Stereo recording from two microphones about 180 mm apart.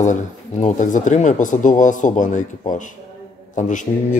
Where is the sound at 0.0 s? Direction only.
45° left (ahead or behind).